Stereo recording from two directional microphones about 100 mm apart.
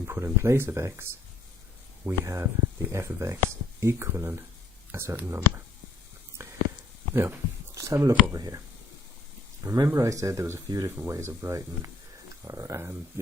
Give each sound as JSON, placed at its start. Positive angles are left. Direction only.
{"t": 0.0, "sound": "speech", "side_deg": -25}
{"t": 2.0, "sound": "speech", "side_deg": -30}
{"t": 6.3, "sound": "a sound", "side_deg": -30}
{"t": 7.1, "sound": "speech", "side_deg": -25}
{"t": 9.6, "sound": "speech", "side_deg": -30}